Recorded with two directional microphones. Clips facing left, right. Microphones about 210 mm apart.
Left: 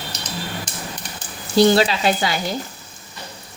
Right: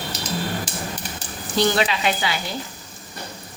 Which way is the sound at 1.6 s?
35° left (ahead or behind).